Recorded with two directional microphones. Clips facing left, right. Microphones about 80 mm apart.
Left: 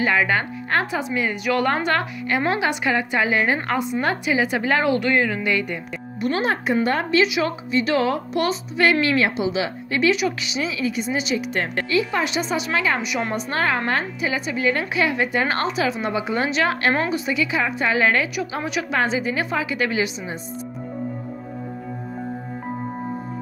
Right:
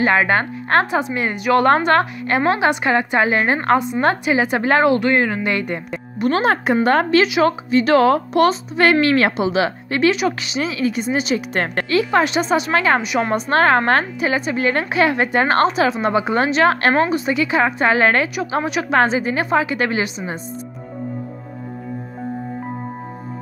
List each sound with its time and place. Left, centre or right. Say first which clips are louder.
0.0 s speech: right 4 dB; right
6.2 s a woman's voice: right 5 dB; right
13.0 s speech: right 5 dB; right
13.3 s a woman's voice: right 9 dB; right